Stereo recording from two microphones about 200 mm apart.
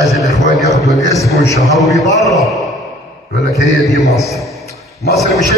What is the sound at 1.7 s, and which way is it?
A man's voice, centre (ahead or behind).